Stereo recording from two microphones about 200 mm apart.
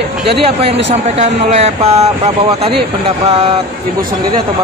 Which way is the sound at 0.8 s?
35° right (ahead or behind).